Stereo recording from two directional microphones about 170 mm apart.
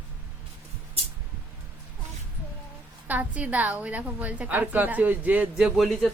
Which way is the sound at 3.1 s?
10° right (ahead or behind).